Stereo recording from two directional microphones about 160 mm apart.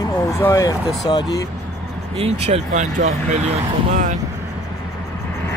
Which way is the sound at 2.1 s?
40° right (ahead or behind).